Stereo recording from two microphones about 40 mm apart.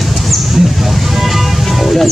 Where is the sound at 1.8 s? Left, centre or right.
Centre.